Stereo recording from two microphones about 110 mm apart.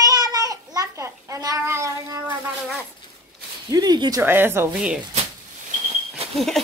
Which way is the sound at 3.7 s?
35° right (ahead or behind).